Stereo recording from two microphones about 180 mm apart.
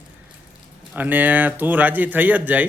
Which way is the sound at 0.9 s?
10° right (ahead or behind).